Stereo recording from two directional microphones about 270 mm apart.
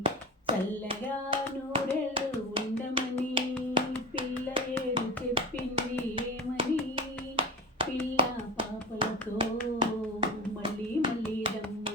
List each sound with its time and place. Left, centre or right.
0.0 s hands: centre